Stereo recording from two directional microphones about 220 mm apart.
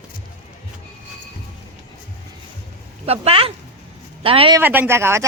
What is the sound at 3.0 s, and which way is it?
Speech, 25° right (ahead or behind).